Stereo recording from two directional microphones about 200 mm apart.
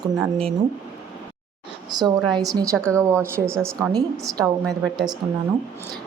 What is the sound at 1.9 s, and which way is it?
A woman's voice, 20° right (ahead or behind).